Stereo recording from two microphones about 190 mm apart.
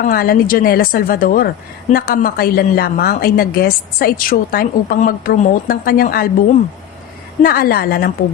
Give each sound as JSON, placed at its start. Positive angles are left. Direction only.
{"t": 0.0, "sound": "a woman's voice", "side_deg": 50}
{"t": 7.4, "sound": "a woman's voice", "side_deg": 50}